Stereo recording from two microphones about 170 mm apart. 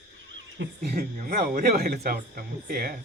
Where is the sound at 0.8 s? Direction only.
50° right (ahead or behind).